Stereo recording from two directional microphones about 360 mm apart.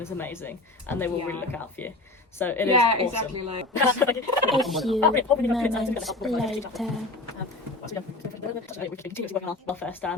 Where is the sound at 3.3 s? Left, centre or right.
Right.